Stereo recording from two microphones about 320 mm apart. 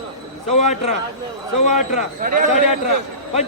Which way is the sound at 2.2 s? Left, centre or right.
Right.